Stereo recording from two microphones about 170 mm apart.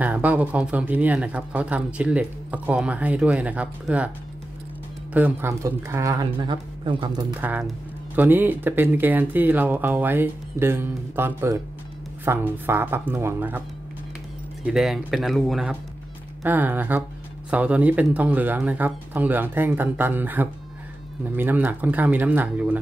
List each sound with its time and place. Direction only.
0.0 s speech: 10° right (ahead or behind)
5.1 s speech: 10° right (ahead or behind)
7.3 s speech: 10° right (ahead or behind)
14.7 s speech: centre (ahead or behind)